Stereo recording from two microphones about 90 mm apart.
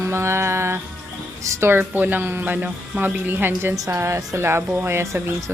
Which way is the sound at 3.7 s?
35° right (ahead or behind).